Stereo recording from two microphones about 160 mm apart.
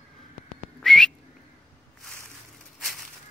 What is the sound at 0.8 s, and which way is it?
Whistling, 5° left (ahead or behind).